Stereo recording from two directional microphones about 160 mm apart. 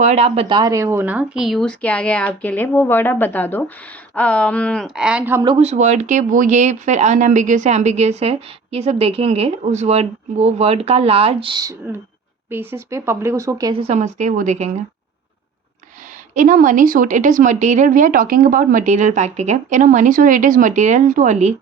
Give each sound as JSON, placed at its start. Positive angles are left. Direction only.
{"t": 0.0, "sound": "speech", "side_deg": -45}
{"t": 5.5, "sound": "speech", "side_deg": -45}
{"t": 13.7, "sound": "speech", "side_deg": -40}
{"t": 16.3, "sound": "speech", "side_deg": -55}